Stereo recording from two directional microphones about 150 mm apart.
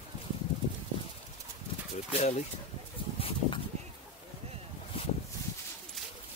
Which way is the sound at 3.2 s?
35° left (ahead or behind).